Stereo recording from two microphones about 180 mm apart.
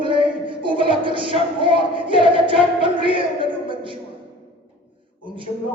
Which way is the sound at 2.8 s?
30° right (ahead or behind).